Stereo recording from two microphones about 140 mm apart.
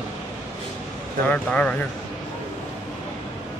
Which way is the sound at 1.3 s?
10° left (ahead or behind).